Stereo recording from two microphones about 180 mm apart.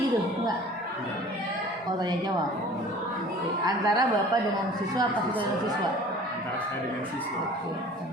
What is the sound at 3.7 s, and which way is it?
Speech, 20° right (ahead or behind).